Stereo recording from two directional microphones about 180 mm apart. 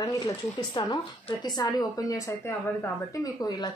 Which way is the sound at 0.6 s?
20° left (ahead or behind).